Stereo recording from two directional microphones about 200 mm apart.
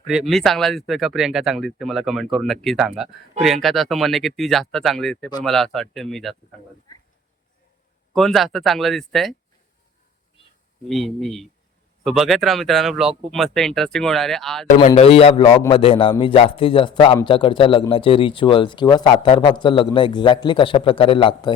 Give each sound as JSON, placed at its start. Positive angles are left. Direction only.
{"t": 0.1, "sound": "speech", "side_deg": 0}
{"t": 8.1, "sound": "speech", "side_deg": 0}
{"t": 10.8, "sound": "speech", "side_deg": 0}
{"t": 14.8, "sound": "speech", "side_deg": 30}